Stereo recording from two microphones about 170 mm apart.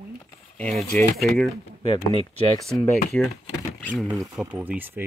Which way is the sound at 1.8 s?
35° left (ahead or behind).